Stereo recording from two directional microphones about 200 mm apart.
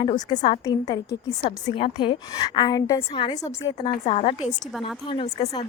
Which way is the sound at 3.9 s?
30° left (ahead or behind).